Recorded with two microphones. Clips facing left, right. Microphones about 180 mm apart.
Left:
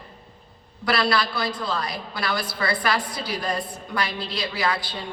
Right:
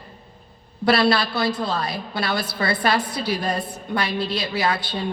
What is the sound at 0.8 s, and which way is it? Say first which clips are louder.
A woman's voice: right 5 dB; 25° right (ahead or behind).